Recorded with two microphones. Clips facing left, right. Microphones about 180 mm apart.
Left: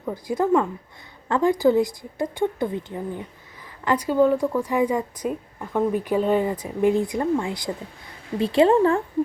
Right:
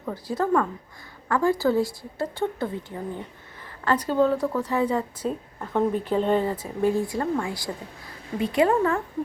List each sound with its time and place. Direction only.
0.0 s a woman's voice: 15° left (ahead or behind)